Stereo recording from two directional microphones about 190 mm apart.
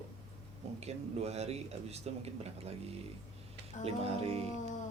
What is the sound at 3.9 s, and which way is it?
Speech, 30° right (ahead or behind).